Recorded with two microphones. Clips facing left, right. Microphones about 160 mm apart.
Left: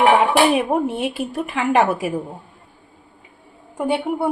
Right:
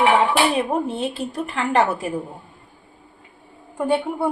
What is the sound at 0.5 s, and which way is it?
A woman's voice, 10° left (ahead or behind).